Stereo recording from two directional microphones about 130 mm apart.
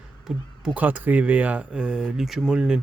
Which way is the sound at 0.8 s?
10° right (ahead or behind).